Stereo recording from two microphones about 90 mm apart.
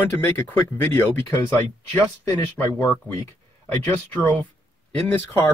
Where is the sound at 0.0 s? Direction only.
25° left (ahead or behind).